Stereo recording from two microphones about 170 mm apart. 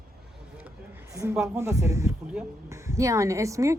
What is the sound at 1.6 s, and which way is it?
A woman's voice, 15° right (ahead or behind).